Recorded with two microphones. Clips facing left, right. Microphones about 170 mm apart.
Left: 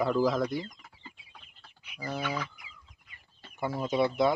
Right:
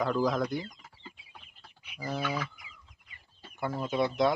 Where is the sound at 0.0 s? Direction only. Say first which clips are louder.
Left 2 dB; 5° left (ahead or behind).